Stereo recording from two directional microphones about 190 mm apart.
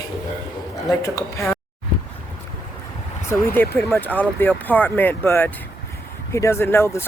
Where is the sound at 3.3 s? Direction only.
10° left (ahead or behind).